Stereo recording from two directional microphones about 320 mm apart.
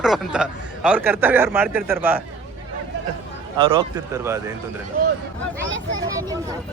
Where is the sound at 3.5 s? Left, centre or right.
Centre.